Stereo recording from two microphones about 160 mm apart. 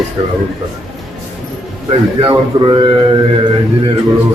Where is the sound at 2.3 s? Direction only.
30° right (ahead or behind).